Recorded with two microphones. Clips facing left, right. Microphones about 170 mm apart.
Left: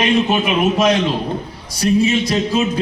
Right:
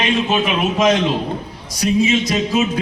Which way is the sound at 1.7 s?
15° right (ahead or behind).